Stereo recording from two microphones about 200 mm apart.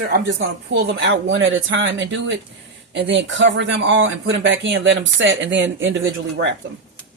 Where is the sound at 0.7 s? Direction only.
60° right (ahead or behind).